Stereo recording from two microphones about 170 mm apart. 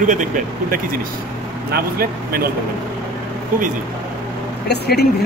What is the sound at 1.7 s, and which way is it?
Speech, 65° right (ahead or behind).